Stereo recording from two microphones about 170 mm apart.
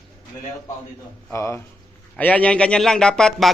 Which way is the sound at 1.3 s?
15° left (ahead or behind).